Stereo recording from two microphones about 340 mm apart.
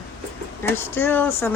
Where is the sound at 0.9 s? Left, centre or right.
Centre.